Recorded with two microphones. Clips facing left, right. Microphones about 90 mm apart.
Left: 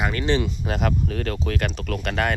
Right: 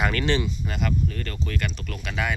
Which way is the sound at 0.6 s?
65° left (ahead or behind).